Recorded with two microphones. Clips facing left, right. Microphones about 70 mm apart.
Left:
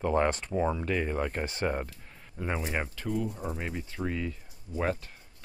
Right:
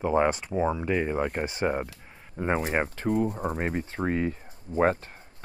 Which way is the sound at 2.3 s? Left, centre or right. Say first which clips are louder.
Right 6 dB; right.